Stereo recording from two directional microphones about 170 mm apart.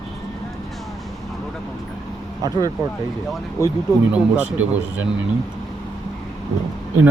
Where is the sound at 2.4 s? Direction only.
20° right (ahead or behind).